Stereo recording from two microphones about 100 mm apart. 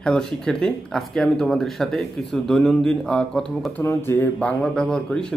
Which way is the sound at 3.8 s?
25° left (ahead or behind).